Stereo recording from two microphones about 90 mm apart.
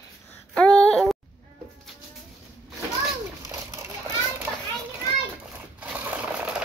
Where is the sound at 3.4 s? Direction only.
35° right (ahead or behind).